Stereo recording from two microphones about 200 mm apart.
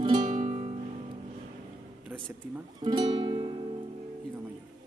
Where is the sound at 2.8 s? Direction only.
20° right (ahead or behind).